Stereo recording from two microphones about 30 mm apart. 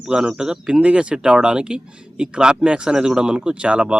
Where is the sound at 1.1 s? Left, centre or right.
Right.